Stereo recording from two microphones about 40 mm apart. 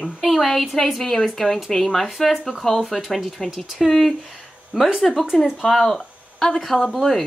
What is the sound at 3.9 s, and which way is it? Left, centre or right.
A woman's voice, centre.